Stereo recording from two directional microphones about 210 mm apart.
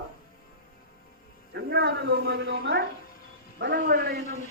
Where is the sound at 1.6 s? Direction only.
55° right (ahead or behind).